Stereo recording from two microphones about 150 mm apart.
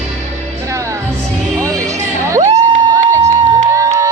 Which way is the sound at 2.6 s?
20° right (ahead or behind).